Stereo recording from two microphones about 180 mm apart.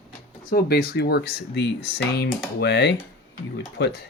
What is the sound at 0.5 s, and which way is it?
Speech, 60° left (ahead or behind).